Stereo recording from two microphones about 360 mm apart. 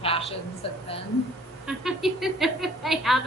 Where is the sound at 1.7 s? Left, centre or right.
Centre.